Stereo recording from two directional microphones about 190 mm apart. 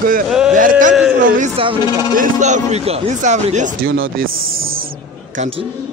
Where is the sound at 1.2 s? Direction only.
45° right (ahead or behind).